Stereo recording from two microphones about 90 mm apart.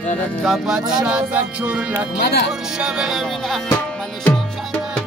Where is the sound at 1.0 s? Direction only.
15° right (ahead or behind).